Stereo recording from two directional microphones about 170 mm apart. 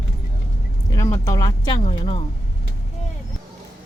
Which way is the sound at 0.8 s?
20° left (ahead or behind).